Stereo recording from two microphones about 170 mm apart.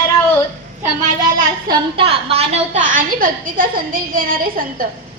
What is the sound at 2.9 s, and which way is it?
A woman's voice, 55° right (ahead or behind).